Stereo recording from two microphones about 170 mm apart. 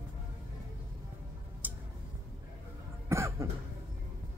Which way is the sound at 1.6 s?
10° right (ahead or behind).